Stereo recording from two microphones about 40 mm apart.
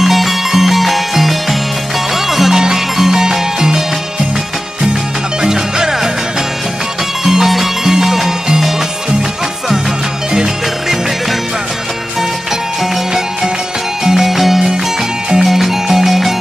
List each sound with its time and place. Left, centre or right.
0.0 s music: centre
5.4 s music: centre
7.2 s music: centre
12.8 s music: centre